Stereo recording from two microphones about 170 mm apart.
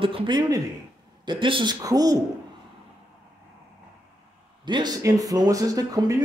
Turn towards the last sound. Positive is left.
turn(degrees=-20)  # may be behind; listen again after turning